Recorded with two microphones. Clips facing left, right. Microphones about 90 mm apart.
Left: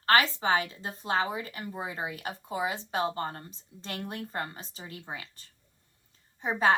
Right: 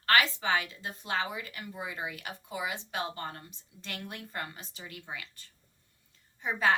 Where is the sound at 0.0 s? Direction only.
30° left (ahead or behind).